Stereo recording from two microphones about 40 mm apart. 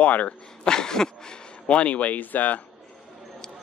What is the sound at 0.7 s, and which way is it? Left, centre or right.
Speech, centre.